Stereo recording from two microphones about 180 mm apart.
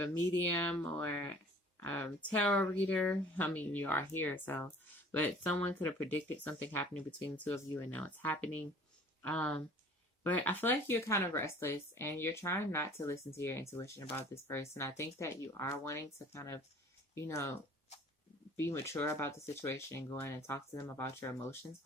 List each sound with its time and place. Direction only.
0.5 s speech: 10° left (ahead or behind)